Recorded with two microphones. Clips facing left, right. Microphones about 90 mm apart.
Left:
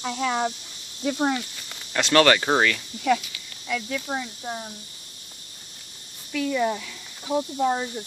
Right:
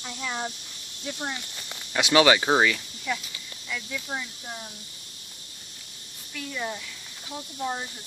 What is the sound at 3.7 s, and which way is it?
Speech, 65° left (ahead or behind).